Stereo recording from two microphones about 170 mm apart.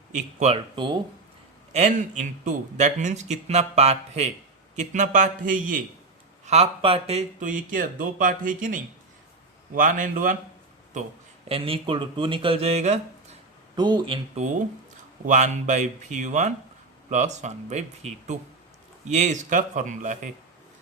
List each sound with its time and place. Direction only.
0.1 s a man's voice: 45° right (ahead or behind)
1.7 s a man's voice: 45° right (ahead or behind)
6.4 s a man's voice: 40° right (ahead or behind)
11.4 s speech: 35° right (ahead or behind)
13.7 s speech: 25° right (ahead or behind)
15.3 s a man's voice: 45° right (ahead or behind)